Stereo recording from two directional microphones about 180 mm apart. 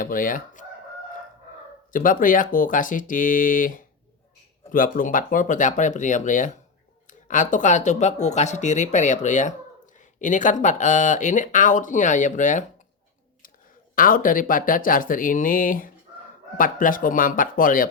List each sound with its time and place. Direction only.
0.0 s chicken: 50° left (ahead or behind)
1.9 s speech: 50° left (ahead or behind)
13.9 s speech: 50° left (ahead or behind)